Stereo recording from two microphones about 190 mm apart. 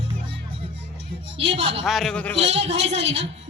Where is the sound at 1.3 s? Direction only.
30° right (ahead or behind).